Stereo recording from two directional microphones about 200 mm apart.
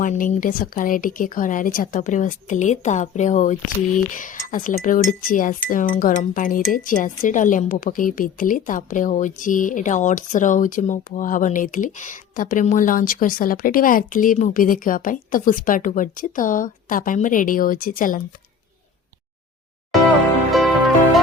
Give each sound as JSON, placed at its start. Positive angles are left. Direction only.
{"t": 0.0, "sound": "speech", "side_deg": 40}
{"t": 20.5, "sound": "music", "side_deg": 0}